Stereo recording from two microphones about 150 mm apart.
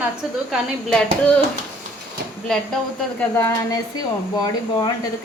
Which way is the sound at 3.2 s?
15° left (ahead or behind).